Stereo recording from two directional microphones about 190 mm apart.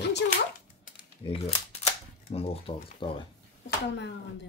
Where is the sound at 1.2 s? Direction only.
30° left (ahead or behind).